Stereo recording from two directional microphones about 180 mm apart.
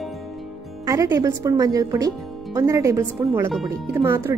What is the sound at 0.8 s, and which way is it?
A woman's voice, 20° right (ahead or behind).